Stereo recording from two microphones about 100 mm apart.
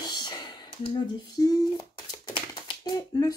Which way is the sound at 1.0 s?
40° left (ahead or behind).